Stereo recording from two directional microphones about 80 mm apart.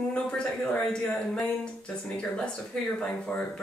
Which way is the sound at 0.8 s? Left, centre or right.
Centre.